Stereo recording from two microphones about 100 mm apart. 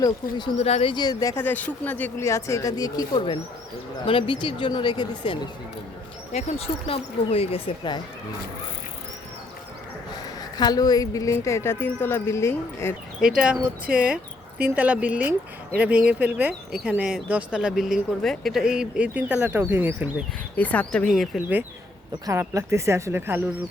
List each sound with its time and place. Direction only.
0.0 s speech: 45° left (ahead or behind)
0.5 s speech: 90° left
0.9 s speech: 40° left (ahead or behind)
1.4 s speech: 20° left (ahead or behind)
2.2 s speech: 30° left (ahead or behind)
3.2 s speech: 75° left (ahead or behind)
4.0 s speech: 60° left (ahead or behind)
6.3 s speech: 80° left
10.6 s speech: 40° left (ahead or behind); by 12.9 s 25° left (ahead or behind)
13.2 s speech: 10° right (ahead or behind)
20.6 s speech: 15° left (ahead or behind)
22.3 s speech: 30° right (ahead or behind)